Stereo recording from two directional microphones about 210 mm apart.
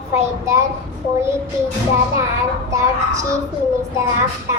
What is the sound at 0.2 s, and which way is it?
Speech, 15° right (ahead or behind).